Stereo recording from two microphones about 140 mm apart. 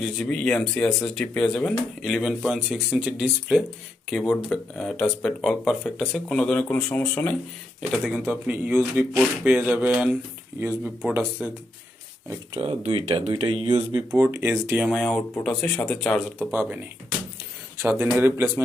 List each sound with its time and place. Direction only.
0.0 s speech: 5° left (ahead or behind)
8.3 s speech: 10° right (ahead or behind)
12.5 s speech: 40° right (ahead or behind)
13.9 s speech: 15° right (ahead or behind)
15.0 s speech: 10° left (ahead or behind)
16.4 s speech: 10° right (ahead or behind)
17.8 s speech: 15° right (ahead or behind)